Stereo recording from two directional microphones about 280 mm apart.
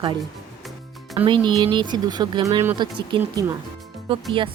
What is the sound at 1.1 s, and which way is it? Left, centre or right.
Speech, centre.